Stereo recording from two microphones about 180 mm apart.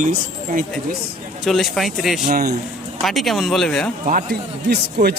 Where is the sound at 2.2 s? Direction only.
60° right (ahead or behind).